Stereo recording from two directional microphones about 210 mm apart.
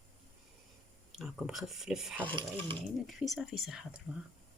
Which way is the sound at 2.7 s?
Centre (ahead or behind).